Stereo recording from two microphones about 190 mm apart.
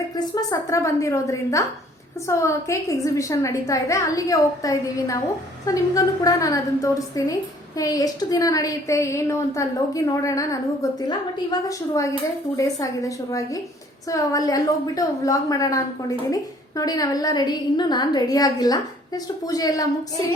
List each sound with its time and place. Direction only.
0.3 s a woman's voice: 20° left (ahead or behind)